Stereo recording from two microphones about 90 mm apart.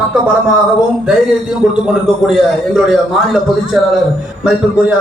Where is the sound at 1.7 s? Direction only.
5° right (ahead or behind).